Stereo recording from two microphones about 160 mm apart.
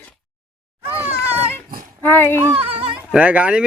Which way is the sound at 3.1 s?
10° right (ahead or behind).